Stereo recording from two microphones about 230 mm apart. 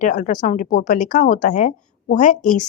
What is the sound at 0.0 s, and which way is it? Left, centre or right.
A woman's voice, left.